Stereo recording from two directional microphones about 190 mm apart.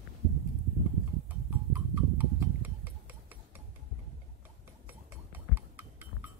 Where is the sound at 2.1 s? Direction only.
10° right (ahead or behind).